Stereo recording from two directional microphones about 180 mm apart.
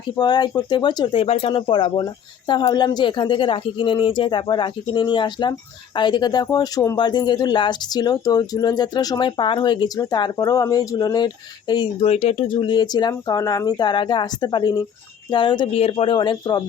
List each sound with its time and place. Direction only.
0.2 s speech: 25° left (ahead or behind)